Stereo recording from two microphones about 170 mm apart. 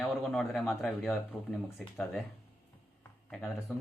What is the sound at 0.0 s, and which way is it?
Speech, 5° left (ahead or behind).